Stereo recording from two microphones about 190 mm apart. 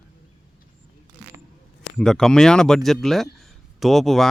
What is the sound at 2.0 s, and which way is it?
A man's voice, 5° left (ahead or behind).